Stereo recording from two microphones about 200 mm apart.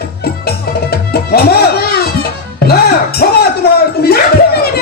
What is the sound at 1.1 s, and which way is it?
Music, 50° left (ahead or behind).